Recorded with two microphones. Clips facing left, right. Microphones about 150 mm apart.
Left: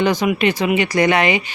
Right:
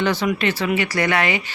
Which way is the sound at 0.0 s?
15° left (ahead or behind).